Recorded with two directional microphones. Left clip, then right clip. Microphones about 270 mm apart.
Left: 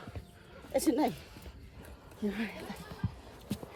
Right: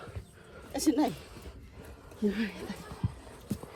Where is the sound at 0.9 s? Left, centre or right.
Centre.